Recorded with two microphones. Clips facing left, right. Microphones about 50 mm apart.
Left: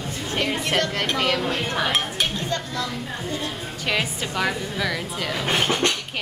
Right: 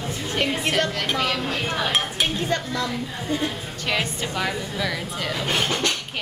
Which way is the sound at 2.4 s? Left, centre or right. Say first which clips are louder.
Right 2 dB; right.